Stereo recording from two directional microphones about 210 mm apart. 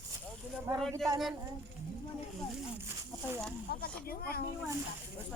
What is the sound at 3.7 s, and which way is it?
Speech, 45° left (ahead or behind).